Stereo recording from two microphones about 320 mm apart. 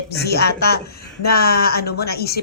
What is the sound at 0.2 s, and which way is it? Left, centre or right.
Speech, left.